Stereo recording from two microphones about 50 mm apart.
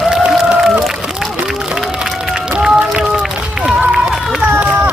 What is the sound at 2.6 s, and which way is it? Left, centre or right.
Run, centre.